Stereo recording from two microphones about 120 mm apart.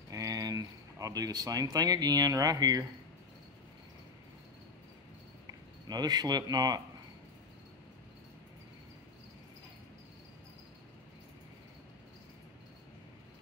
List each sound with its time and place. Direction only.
0.1 s speech: 30° right (ahead or behind)
5.5 s speech: 35° right (ahead or behind)